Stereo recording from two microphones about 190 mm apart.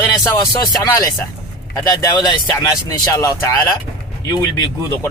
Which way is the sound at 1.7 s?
20° left (ahead or behind).